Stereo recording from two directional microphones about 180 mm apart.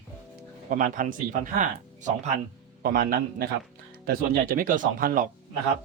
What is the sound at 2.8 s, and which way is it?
A man's voice, 55° right (ahead or behind).